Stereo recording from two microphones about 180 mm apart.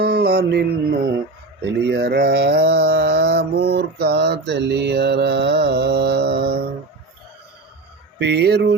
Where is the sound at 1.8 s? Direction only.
60° right (ahead or behind).